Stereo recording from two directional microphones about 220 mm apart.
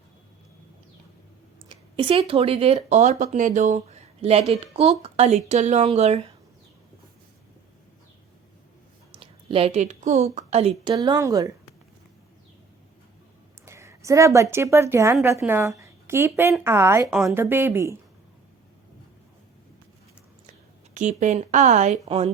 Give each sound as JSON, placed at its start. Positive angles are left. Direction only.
{"t": 1.7, "sound": "speech", "side_deg": -25}
{"t": 9.1, "sound": "a woman's voice", "side_deg": -25}
{"t": 13.7, "sound": "a sound", "side_deg": -15}
{"t": 14.5, "sound": "a woman's voice", "side_deg": -10}
{"t": 20.5, "sound": "a woman's voice", "side_deg": -35}